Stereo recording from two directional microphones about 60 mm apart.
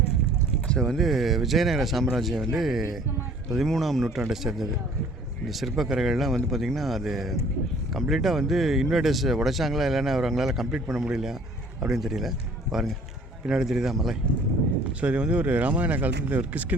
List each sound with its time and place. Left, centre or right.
0.7 s speech: centre
0.9 s speech: centre
15.0 s speech: centre